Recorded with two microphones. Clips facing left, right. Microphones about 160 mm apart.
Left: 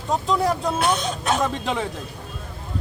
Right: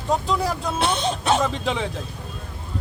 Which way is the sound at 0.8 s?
30° right (ahead or behind).